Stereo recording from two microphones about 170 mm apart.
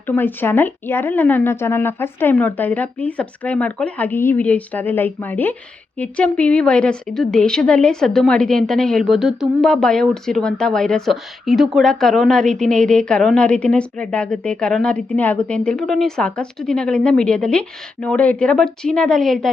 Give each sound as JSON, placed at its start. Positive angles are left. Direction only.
{"t": 0.1, "sound": "a woman's voice", "side_deg": 10}